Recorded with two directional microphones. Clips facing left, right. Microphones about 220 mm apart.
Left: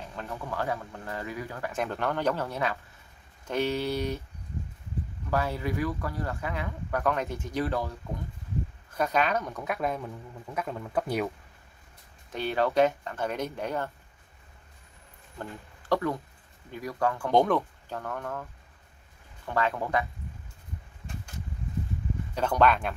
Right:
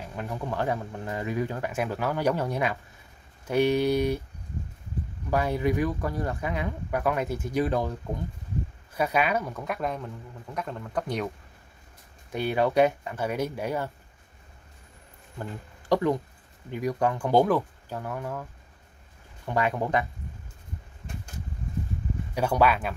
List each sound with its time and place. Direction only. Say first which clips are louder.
0.0 s speech: right 4 dB; 15° right (ahead or behind)
1.7 s speech: right 2 dB; 5° right (ahead or behind)
5.3 s speech: right 4 dB; 15° right (ahead or behind)
8.9 s speech: right 1 dB; 10° right (ahead or behind); by 11.2 s 5° left (ahead or behind)
12.3 s speech: right 2 dB; 10° right (ahead or behind)
15.9 s speech: right 4 dB; 20° right (ahead or behind)
17.3 s speech: right 1 dB; 5° right (ahead or behind)
22.3 s speech: right 1 dB; 10° right (ahead or behind)